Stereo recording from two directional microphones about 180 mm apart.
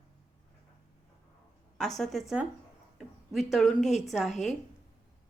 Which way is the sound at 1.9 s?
Centre (ahead or behind).